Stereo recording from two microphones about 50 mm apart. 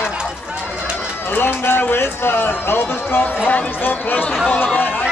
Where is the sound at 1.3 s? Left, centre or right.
Left.